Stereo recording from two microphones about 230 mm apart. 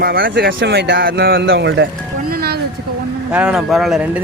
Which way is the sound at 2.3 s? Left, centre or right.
Right.